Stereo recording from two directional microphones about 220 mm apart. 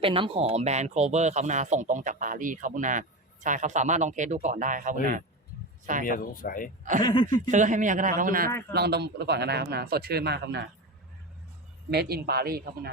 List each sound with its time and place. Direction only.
0.0 s speech: 25° right (ahead or behind)
6.1 s speech: 40° left (ahead or behind)
7.0 s speech: 20° left (ahead or behind)
7.3 s a man's voice: 35° right (ahead or behind)
11.9 s a man's voice: 45° right (ahead or behind)